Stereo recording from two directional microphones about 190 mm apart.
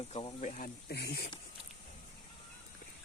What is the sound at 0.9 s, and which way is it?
Speech, 60° left (ahead or behind).